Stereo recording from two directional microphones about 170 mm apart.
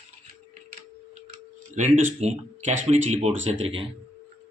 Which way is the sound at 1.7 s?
40° right (ahead or behind).